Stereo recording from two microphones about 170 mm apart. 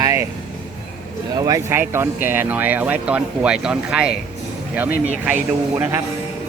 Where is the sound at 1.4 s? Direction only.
20° right (ahead or behind).